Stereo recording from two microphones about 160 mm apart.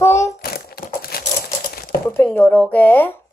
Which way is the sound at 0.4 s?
70° left (ahead or behind).